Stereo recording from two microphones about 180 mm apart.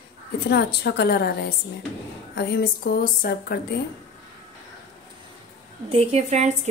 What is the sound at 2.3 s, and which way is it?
Speech, 65° left (ahead or behind).